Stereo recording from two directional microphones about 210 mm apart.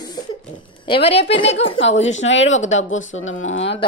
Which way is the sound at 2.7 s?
65° left (ahead or behind).